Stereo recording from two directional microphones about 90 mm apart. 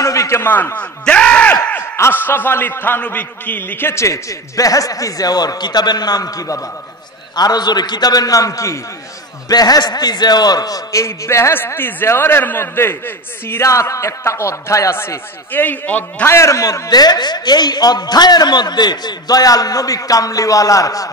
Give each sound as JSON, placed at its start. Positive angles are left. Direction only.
{"t": 0.0, "sound": "a sound", "side_deg": 35}
{"t": 0.5, "sound": "a sound", "side_deg": 20}
{"t": 2.0, "sound": "a man's voice", "side_deg": 25}
{"t": 7.3, "sound": "a man's voice", "side_deg": 50}
{"t": 9.5, "sound": "a man's voice", "side_deg": 45}
{"t": 16.3, "sound": "a man's voice", "side_deg": 35}